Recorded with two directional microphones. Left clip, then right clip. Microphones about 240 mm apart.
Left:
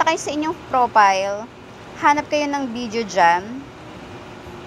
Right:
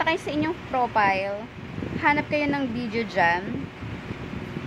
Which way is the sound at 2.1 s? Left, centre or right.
Centre.